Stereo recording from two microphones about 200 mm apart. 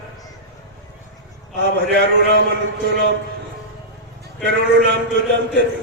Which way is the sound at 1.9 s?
60° right (ahead or behind).